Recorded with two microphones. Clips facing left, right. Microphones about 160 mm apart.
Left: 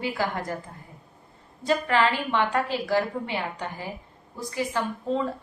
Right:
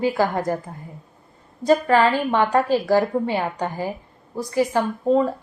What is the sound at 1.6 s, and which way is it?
A woman's voice, 45° right (ahead or behind).